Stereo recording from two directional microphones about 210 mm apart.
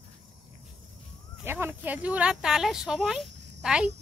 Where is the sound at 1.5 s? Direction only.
10° right (ahead or behind).